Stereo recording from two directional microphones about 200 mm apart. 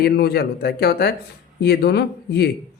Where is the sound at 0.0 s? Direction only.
50° left (ahead or behind).